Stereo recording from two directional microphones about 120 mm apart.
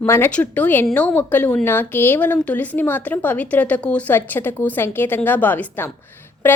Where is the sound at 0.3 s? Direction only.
10° left (ahead or behind).